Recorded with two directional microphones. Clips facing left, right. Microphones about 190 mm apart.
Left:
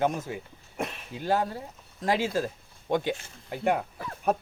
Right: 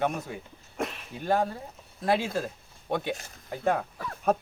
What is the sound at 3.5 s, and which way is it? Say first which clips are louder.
Speech: even; 15° left (ahead or behind).